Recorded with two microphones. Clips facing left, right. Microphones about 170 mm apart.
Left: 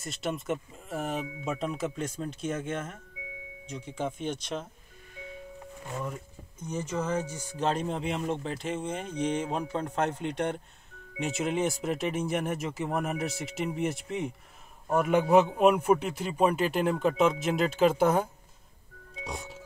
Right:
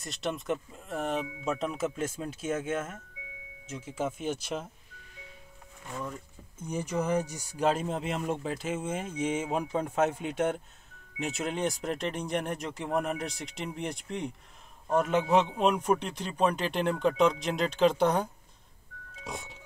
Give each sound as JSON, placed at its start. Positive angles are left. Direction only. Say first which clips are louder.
{"t": 0.0, "sound": "speech", "louder": "left 1 dB", "side_deg": 0}
{"t": 6.6, "sound": "speech", "louder": "right 1 dB", "side_deg": -10}